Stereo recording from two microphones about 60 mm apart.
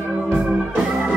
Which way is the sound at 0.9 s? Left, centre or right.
Centre.